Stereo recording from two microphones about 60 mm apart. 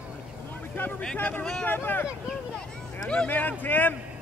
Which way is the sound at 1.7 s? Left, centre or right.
Left.